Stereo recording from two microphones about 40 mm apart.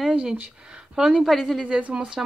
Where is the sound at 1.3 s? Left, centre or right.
Centre.